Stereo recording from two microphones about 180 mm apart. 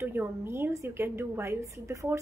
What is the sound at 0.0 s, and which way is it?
A woman's voice, 15° right (ahead or behind).